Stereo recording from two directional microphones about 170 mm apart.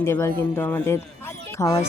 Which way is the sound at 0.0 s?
15° left (ahead or behind).